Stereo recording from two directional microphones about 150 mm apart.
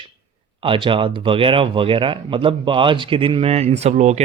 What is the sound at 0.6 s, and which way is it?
Speech, 35° right (ahead or behind).